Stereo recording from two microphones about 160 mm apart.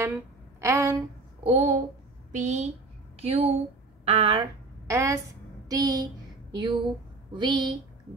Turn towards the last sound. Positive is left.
turn(degrees=-30)  # may be behind; listen again after turning